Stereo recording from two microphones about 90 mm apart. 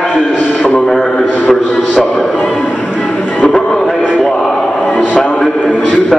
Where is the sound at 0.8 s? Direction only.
5° right (ahead or behind).